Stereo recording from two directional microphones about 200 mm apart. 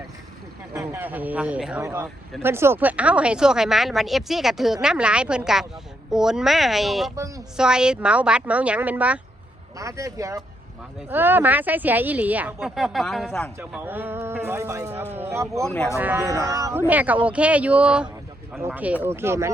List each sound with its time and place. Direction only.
0.7 s speech: 10° right (ahead or behind)
13.6 s speech: 10° right (ahead or behind)
15.6 s speech: 5° left (ahead or behind)
16.0 s speech: 10° right (ahead or behind)